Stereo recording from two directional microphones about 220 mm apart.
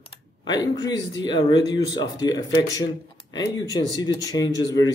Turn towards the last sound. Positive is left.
turn(degrees=15)  # may be behind; listen again after turning